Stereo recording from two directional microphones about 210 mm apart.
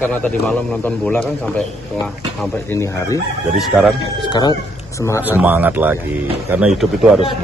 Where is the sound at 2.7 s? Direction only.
15° left (ahead or behind).